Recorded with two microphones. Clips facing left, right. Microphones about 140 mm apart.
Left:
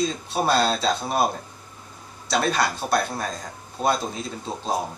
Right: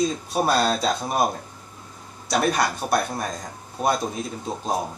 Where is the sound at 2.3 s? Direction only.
15° right (ahead or behind).